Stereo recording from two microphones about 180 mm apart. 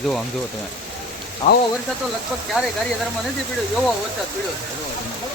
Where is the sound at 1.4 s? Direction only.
40° left (ahead or behind).